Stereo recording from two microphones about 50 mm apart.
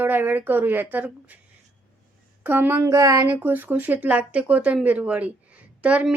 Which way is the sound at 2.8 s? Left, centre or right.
Right.